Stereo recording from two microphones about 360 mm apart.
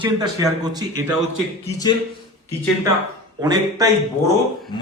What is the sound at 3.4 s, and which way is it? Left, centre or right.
Speech, centre.